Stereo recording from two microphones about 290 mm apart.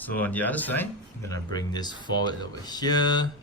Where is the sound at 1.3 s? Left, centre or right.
Centre.